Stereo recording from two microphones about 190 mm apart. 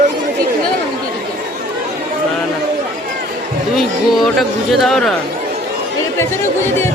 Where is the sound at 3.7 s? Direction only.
Centre (ahead or behind).